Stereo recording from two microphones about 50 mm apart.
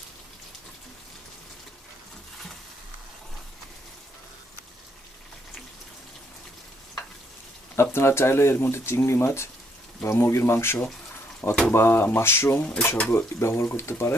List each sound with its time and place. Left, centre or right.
7.8 s speech: left
12.5 s speech: left
13.1 s speech: left